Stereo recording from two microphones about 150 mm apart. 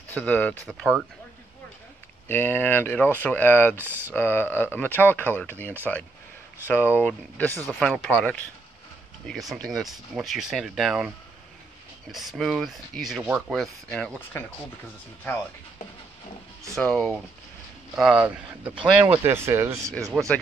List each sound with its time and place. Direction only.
0.1 s speech: 10° left (ahead or behind)
2.2 s speech: 15° left (ahead or behind)
3.7 s speech: 15° right (ahead or behind)
4.1 s speech: 15° left (ahead or behind); by 11.1 s 5° right (ahead or behind)
12.1 s speech: centre (ahead or behind)
16.7 s speech: 5° left (ahead or behind)
17.9 s speech: 5° right (ahead or behind)
20.1 s speech: 5° right (ahead or behind)